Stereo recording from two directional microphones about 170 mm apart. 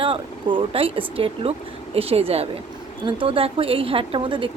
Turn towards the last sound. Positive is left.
turn(degrees=-30)  # may be behind; listen again after turning